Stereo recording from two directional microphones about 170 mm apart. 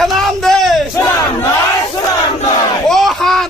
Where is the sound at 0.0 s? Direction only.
Centre (ahead or behind).